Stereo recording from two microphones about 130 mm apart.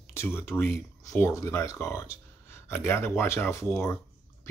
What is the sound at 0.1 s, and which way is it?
Speech, 20° left (ahead or behind).